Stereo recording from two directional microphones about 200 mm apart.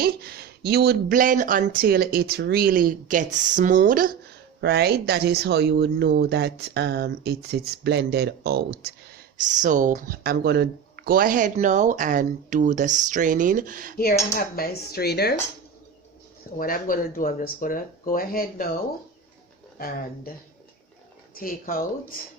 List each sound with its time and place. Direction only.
0.0 s speech: 50° right (ahead or behind)
9.5 s speech: 40° right (ahead or behind)
14.3 s speech: 45° left (ahead or behind)
16.6 s speech: 45° left (ahead or behind)
21.3 s speech: 45° left (ahead or behind)